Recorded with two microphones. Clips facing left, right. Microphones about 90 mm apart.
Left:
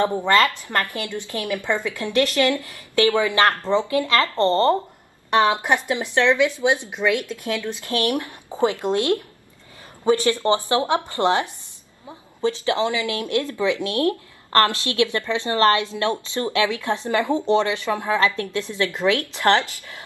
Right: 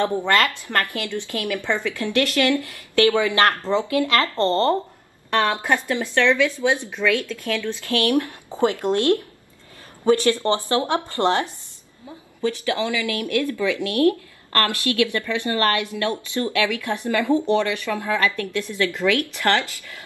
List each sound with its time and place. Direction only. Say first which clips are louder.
0.0 s speech: left 2 dB; 15° left (ahead or behind)